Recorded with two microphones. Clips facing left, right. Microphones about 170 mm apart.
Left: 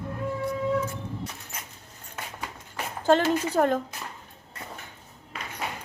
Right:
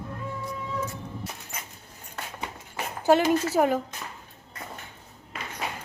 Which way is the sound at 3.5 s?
5° right (ahead or behind).